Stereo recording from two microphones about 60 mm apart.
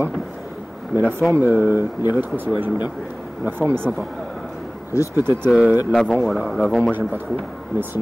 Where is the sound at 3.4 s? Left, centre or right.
Right.